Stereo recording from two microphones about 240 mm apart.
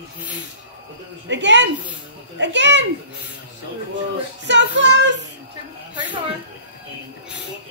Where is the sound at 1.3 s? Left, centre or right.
Right.